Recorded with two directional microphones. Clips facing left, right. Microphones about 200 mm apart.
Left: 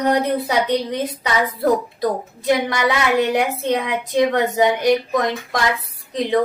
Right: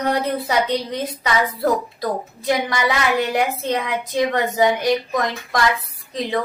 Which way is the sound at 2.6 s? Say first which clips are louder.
Left 1 dB; 20° left (ahead or behind).